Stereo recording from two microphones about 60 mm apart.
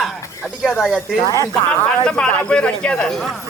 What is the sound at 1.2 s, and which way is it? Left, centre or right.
Speech, left.